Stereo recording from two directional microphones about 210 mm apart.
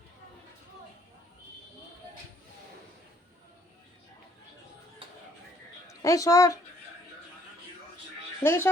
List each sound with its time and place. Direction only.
5.9 s a woman's voice: 15° left (ahead or behind)
8.4 s speech: 10° left (ahead or behind)